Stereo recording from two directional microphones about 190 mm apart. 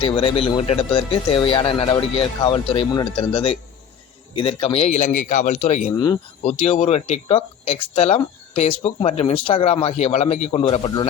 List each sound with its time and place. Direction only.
0.0 s speech: 30° left (ahead or behind)
6.0 s speech: 25° left (ahead or behind)